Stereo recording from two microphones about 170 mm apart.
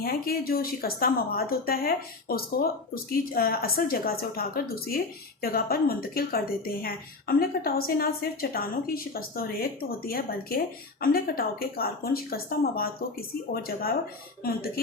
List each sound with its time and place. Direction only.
0.0 s speech: 60° left (ahead or behind)